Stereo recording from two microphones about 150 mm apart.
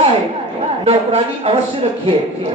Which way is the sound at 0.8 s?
40° right (ahead or behind).